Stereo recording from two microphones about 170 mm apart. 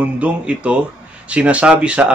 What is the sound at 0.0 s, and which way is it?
A man's voice, 5° right (ahead or behind).